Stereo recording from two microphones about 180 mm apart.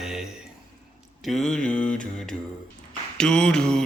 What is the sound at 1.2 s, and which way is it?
Mantra, centre (ahead or behind).